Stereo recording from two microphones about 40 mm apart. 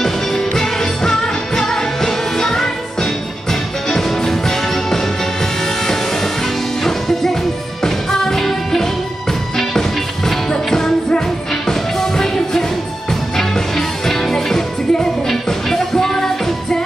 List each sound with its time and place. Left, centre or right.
0.0 s music: centre